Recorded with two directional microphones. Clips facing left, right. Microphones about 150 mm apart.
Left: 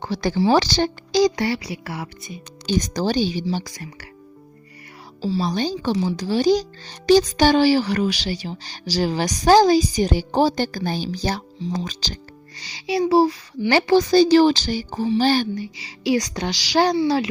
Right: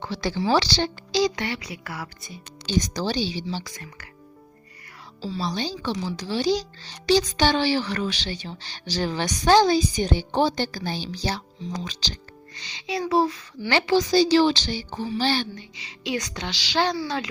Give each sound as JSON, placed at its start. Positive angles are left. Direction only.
{"t": 0.0, "sound": "speech", "side_deg": 45}
{"t": 2.6, "sound": "speech", "side_deg": 50}
{"t": 5.4, "sound": "speech", "side_deg": 50}
{"t": 11.6, "sound": "speech", "side_deg": 35}
{"t": 11.9, "sound": "speech", "side_deg": 45}
{"t": 12.6, "sound": "speech", "side_deg": 35}
{"t": 15.8, "sound": "speech", "side_deg": 35}